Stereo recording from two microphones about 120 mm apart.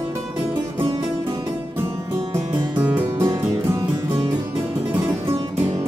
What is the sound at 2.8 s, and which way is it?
Music, 15° right (ahead or behind).